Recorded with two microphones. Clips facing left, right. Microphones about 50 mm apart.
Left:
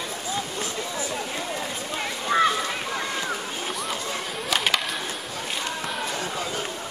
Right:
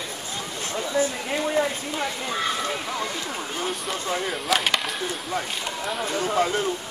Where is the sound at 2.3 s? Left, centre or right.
Left.